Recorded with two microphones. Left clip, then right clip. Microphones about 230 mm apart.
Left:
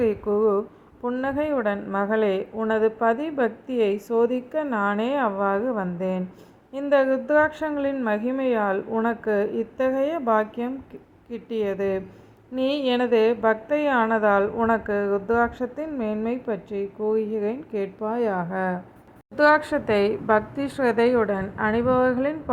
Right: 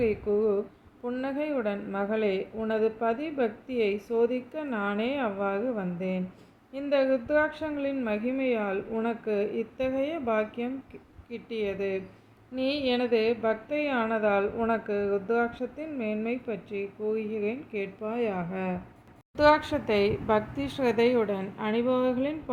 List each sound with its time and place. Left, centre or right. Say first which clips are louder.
0.0 s a woman's voice: left 5 dB; left